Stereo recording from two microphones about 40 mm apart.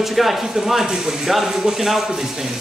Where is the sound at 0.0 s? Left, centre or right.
Centre.